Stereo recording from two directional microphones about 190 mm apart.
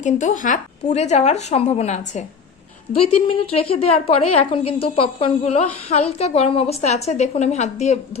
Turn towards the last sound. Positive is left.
turn(degrees=35)  # may be behind; listen again after turning